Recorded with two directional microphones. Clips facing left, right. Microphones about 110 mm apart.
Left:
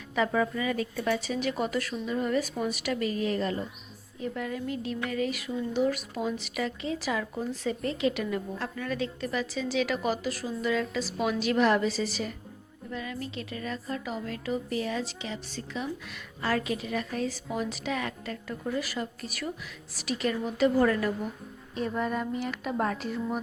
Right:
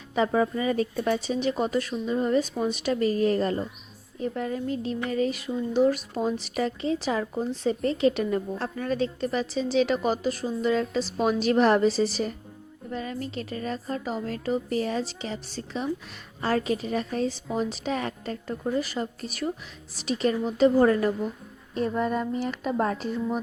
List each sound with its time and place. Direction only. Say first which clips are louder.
0.1 s speech: right 3 dB; 30° right (ahead or behind)